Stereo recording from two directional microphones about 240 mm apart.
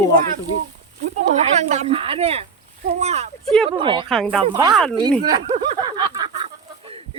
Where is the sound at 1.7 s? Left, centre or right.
Right.